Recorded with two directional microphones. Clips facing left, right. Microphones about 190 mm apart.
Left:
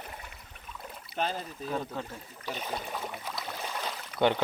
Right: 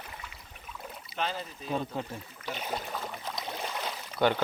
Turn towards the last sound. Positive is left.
turn(degrees=25)  # may be behind; listen again after turning